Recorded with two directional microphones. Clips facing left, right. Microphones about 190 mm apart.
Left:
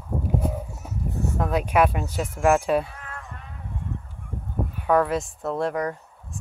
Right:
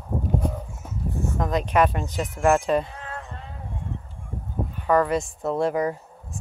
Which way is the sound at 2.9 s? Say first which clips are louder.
Right 4 dB; 30° right (ahead or behind).